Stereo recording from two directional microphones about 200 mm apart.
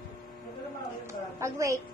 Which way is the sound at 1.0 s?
15° right (ahead or behind).